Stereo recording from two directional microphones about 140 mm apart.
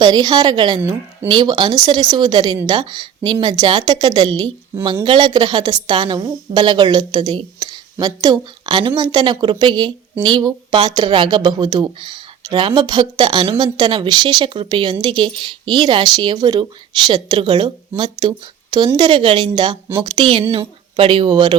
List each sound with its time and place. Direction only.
0.0 s a woman's voice: 30° right (ahead or behind)